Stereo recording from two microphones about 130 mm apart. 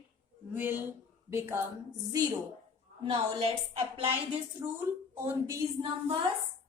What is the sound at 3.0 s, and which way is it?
Female singing, 45° right (ahead or behind).